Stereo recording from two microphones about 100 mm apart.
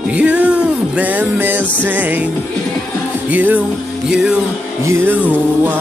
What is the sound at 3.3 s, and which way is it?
Music, 15° right (ahead or behind).